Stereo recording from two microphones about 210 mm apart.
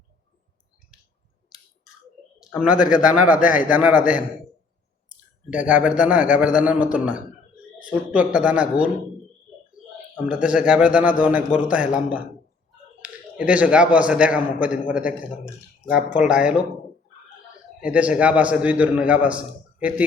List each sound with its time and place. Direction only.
2.4 s a man's voice: 5° right (ahead or behind)
5.5 s a man's voice: 5° right (ahead or behind)
10.2 s a man's voice: 5° right (ahead or behind)
17.9 s a man's voice: 5° right (ahead or behind)